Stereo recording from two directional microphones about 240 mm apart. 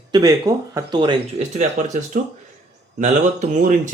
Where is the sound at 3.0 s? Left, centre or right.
Right.